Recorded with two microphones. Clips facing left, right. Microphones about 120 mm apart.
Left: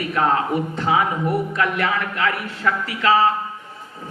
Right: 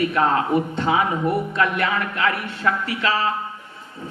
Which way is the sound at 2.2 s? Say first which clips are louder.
Even; 30° right (ahead or behind).